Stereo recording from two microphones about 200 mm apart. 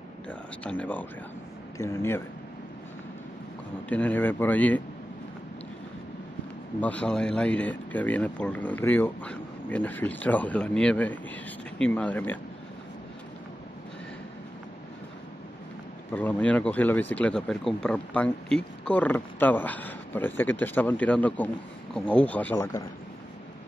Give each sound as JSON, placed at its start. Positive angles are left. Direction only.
{"t": 0.3, "sound": "speech", "side_deg": 5}
{"t": 3.9, "sound": "speech", "side_deg": 10}
{"t": 6.8, "sound": "speech", "side_deg": 5}
{"t": 16.1, "sound": "speech", "side_deg": 10}